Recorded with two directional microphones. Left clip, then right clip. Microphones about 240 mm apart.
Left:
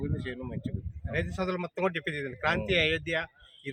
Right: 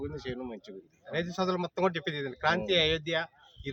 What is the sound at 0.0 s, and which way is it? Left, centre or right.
A man's voice, centre.